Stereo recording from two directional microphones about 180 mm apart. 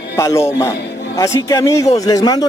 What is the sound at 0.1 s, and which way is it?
A man's voice, 15° left (ahead or behind).